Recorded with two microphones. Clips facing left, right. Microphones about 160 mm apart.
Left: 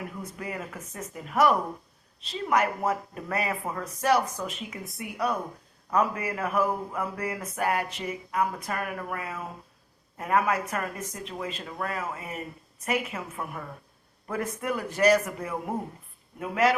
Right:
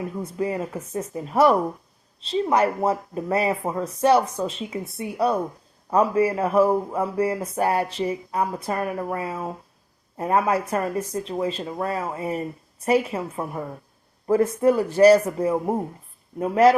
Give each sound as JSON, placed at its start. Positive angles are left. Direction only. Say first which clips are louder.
{"t": 0.0, "sound": "speech", "louder": "right 10 dB", "side_deg": -30}